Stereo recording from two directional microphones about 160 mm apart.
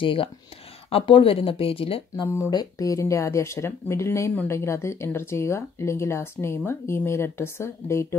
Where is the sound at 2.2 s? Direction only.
20° left (ahead or behind).